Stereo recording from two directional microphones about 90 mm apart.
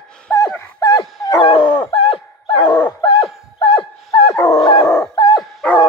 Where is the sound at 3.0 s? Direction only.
65° left (ahead or behind).